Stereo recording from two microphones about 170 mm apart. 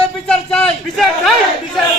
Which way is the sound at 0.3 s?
5° left (ahead or behind).